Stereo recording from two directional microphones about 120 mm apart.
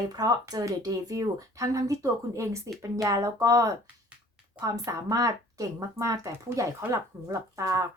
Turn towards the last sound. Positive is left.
turn(degrees=-25)  # may be behind; listen again after turning